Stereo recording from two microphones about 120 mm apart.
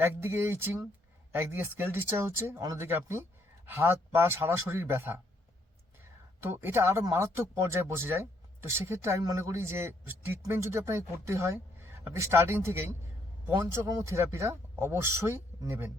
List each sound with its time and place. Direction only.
0.0 s speech: 20° right (ahead or behind)
6.4 s speech: 20° right (ahead or behind)